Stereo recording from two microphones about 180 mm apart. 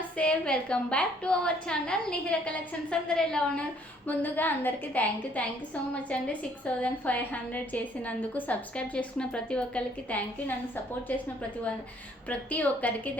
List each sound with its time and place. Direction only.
0.2 s a woman's voice: 5° left (ahead or behind)
6.8 s a woman's voice: 10° left (ahead or behind)
12.3 s a woman's voice: 10° left (ahead or behind)